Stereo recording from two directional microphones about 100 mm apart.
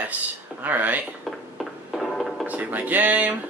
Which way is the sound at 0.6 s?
15° right (ahead or behind).